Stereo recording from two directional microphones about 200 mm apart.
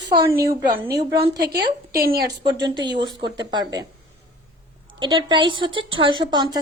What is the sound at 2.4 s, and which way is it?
Speech, 20° right (ahead or behind).